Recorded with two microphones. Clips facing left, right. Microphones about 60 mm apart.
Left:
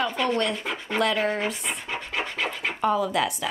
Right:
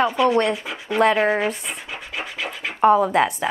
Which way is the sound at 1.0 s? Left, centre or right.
Right.